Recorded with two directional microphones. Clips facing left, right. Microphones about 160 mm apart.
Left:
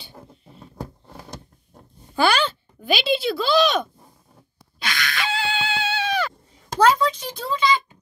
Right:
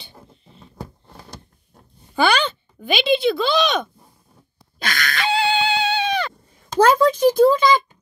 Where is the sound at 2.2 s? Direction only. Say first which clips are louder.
Right 1 dB; 5° left (ahead or behind).